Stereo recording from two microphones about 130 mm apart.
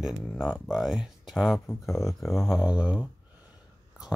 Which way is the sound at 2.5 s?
10° right (ahead or behind).